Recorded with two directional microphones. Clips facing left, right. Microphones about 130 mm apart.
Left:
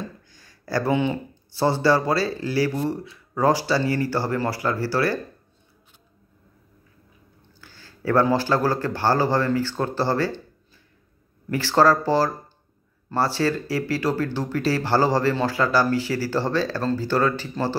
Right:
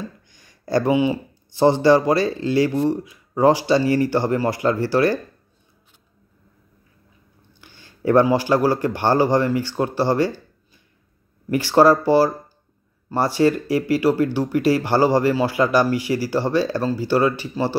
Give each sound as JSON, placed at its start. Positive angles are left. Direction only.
{"t": 0.3, "sound": "a sound", "side_deg": -20}
{"t": 0.9, "sound": "speech", "side_deg": -10}
{"t": 7.6, "sound": "speech", "side_deg": -20}
{"t": 11.5, "sound": "speech", "side_deg": -15}